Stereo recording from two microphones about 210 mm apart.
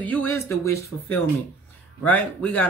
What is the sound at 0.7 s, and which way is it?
Speech, 90° left.